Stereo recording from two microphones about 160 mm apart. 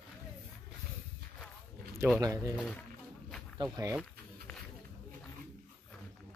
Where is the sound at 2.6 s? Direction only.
5° left (ahead or behind).